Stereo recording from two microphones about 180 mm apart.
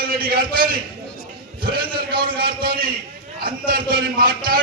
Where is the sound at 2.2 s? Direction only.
55° right (ahead or behind).